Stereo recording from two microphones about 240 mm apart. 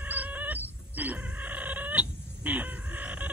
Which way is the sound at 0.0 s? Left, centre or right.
Centre.